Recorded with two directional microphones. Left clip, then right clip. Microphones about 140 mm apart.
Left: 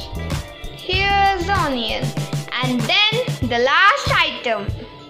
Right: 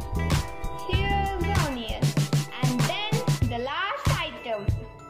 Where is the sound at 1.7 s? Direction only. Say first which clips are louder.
Left 11 dB; 15° left (ahead or behind).